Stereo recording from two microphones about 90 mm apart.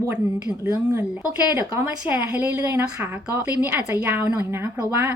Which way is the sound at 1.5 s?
30° right (ahead or behind).